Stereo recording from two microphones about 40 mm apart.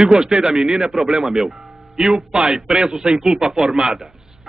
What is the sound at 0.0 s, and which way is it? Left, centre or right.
Speech, centre.